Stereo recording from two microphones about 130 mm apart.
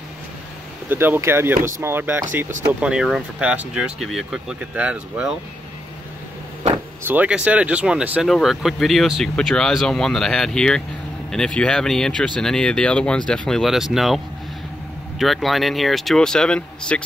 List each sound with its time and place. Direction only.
0.8 s speech: 15° right (ahead or behind)
2.8 s speech: 5° right (ahead or behind)
7.1 s speech: 10° right (ahead or behind); by 17.0 s 5° left (ahead or behind)